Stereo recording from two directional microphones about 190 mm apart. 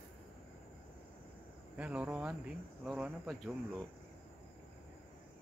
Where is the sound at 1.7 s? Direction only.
5° right (ahead or behind).